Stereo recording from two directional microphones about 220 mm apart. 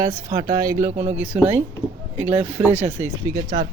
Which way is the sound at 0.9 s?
30° right (ahead or behind).